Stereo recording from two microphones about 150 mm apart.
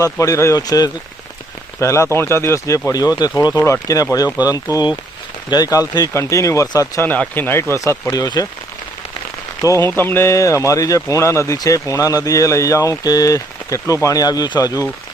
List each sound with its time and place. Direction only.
0.0 s speech: 20° left (ahead or behind)
9.6 s speech: 20° left (ahead or behind)